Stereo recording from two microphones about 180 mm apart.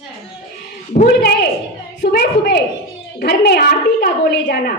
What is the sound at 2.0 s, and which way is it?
A woman's voice, 65° left (ahead or behind).